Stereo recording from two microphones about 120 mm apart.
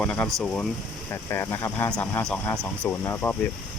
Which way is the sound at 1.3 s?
25° left (ahead or behind).